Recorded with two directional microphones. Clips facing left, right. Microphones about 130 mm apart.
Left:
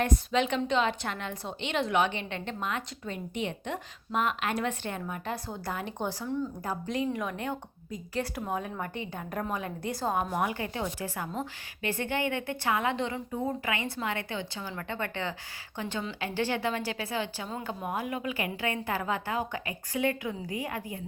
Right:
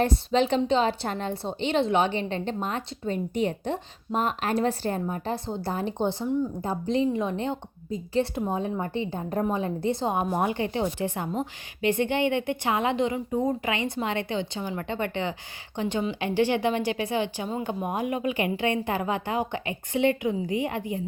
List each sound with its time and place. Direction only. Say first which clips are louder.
0.0 s a woman's voice: right 4 dB; 30° right (ahead or behind)